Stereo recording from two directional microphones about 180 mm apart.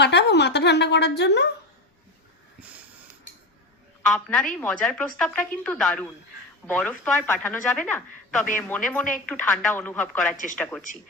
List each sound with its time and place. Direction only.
0.0 s a sound: 70° left (ahead or behind)
2.6 s snort: 10° right (ahead or behind)
4.0 s a woman's voice: 5° left (ahead or behind)